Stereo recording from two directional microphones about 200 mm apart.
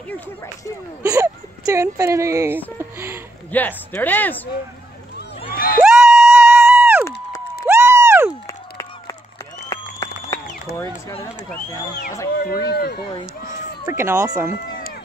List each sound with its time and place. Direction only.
1.0 s speech: 15° right (ahead or behind)
2.8 s a sound: 10° right (ahead or behind)
3.5 s speech: 10° left (ahead or behind)
5.5 s crowd: 45° left (ahead or behind)
5.8 s music: 5° right (ahead or behind)
7.6 s a sound: 15° right (ahead or behind)
9.7 s a sound: 20° left (ahead or behind)
12.6 s speech: 50° left (ahead or behind)
13.8 s speech: 15° right (ahead or behind)